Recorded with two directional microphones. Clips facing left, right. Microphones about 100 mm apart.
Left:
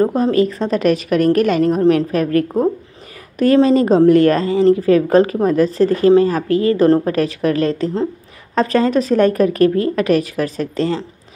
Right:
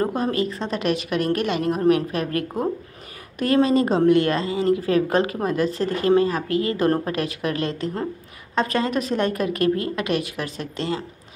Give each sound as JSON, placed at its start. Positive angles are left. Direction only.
{"t": 0.1, "sound": "speech", "side_deg": 35}
{"t": 2.4, "sound": "speech", "side_deg": 0}
{"t": 3.3, "sound": "speech", "side_deg": 35}